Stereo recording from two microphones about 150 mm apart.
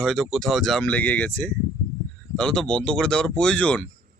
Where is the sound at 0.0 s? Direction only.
Centre (ahead or behind).